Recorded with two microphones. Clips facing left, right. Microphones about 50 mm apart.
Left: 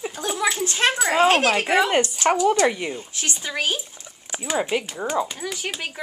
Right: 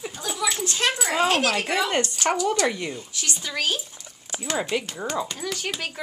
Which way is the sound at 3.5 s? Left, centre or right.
Centre.